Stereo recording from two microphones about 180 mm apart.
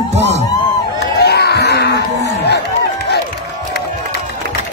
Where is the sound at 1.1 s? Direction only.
65° left (ahead or behind).